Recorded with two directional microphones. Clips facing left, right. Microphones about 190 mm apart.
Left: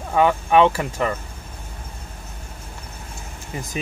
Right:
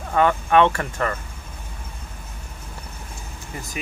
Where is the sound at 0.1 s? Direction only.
15° left (ahead or behind).